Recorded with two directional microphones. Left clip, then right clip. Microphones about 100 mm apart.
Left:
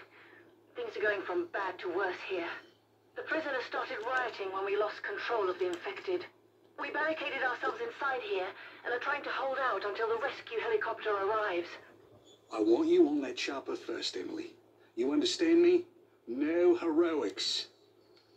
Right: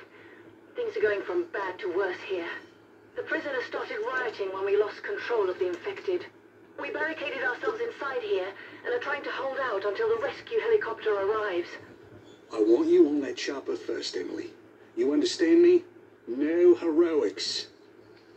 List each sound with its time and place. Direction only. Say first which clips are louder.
0.7 s speech: right 6 dB; 50° left (ahead or behind)